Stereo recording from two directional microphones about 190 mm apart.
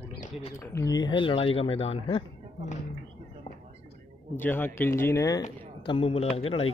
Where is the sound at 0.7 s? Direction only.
20° left (ahead or behind).